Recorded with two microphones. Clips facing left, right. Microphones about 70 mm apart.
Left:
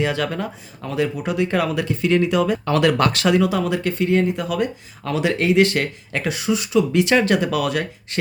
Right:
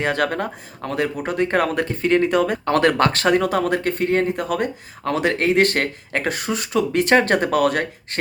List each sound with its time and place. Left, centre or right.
0.0 s speech: right